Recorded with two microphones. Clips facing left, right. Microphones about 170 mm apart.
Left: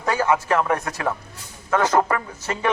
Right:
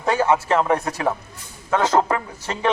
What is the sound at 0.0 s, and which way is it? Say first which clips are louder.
Speech: right 2 dB; 20° right (ahead or behind).